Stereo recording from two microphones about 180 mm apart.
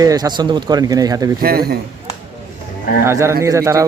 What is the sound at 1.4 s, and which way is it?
Speech, 60° right (ahead or behind).